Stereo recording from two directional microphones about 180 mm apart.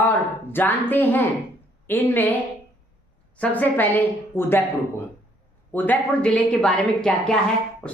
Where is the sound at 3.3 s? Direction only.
10° left (ahead or behind).